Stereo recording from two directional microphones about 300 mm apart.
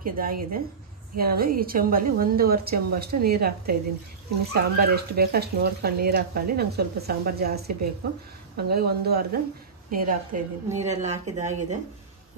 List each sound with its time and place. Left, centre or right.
0.0 s a woman's voice: right